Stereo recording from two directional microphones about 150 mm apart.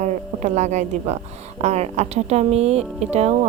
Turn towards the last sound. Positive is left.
turn(degrees=-45)  # may be behind; listen again after turning